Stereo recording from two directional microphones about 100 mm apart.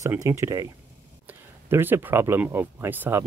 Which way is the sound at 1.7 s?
20° right (ahead or behind).